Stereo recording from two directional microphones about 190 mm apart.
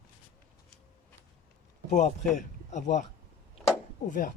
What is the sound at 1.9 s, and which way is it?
Speech, 40° left (ahead or behind).